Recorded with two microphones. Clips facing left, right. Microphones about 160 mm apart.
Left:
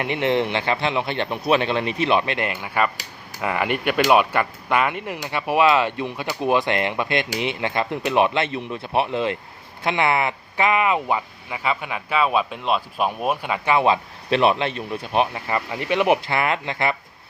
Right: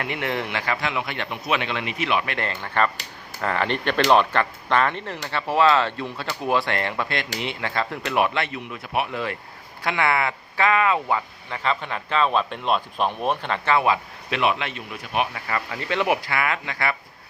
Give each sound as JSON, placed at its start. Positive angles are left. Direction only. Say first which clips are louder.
{"t": 0.0, "sound": "speech", "louder": "left 6 dB", "side_deg": 25}
{"t": 2.3, "sound": "speech", "louder": "left 2 dB", "side_deg": 15}
{"t": 13.8, "sound": "speech", "louder": "left 3 dB", "side_deg": 30}